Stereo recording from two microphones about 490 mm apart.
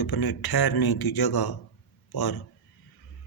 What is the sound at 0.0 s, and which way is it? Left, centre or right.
Speech, left.